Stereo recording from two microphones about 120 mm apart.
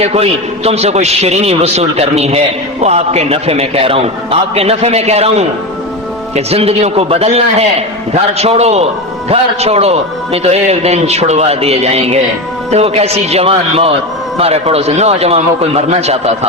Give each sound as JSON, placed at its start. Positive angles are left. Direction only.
{"t": 0.0, "sound": "a man's voice", "side_deg": -60}